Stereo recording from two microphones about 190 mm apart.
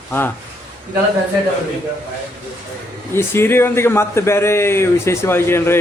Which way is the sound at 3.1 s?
15° left (ahead or behind).